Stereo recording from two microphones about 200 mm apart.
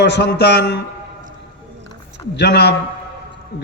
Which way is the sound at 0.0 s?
60° left (ahead or behind).